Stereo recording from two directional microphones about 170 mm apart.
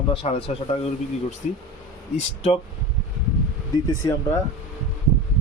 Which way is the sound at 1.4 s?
45° left (ahead or behind).